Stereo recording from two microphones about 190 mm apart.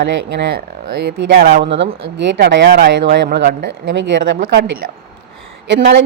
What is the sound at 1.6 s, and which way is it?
A woman's voice, 70° right (ahead or behind).